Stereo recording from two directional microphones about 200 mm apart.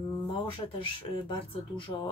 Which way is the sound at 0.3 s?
25° left (ahead or behind).